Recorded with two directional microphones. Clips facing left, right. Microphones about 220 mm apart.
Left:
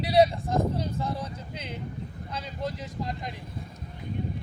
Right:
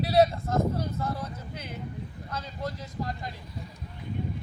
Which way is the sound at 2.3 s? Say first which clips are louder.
Left 1 dB; 15° left (ahead or behind).